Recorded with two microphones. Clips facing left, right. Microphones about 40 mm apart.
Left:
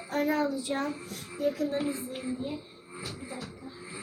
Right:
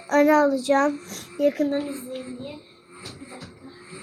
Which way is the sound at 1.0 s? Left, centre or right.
Right.